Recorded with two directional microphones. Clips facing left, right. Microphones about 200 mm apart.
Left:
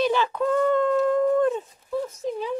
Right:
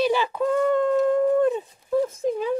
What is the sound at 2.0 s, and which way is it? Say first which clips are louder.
Speech: right 4 dB; 50° right (ahead or behind).